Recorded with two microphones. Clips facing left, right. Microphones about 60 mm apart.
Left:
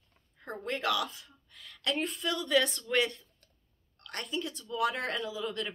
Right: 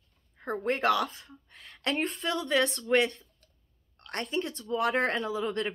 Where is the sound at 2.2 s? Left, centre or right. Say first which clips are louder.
Even; right.